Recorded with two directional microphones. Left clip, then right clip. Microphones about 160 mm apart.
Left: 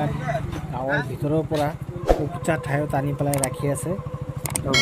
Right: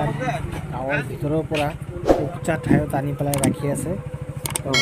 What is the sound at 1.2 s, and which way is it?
Speech, centre (ahead or behind).